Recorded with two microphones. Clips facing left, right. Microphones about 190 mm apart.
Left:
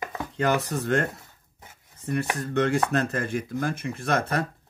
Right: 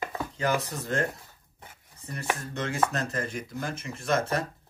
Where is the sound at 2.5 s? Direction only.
65° left (ahead or behind).